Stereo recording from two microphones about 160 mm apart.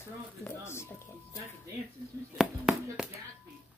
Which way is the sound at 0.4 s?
15° left (ahead or behind).